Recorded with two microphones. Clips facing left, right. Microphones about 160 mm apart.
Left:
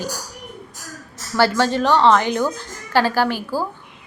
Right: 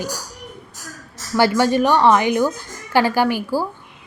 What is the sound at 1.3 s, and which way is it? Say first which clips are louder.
A woman's voice: right 2 dB; 15° right (ahead or behind).